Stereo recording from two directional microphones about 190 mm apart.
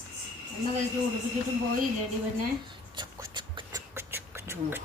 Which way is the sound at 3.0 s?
25° right (ahead or behind).